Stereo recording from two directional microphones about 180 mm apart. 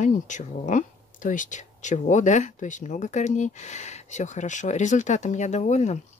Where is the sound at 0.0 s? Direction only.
45° left (ahead or behind).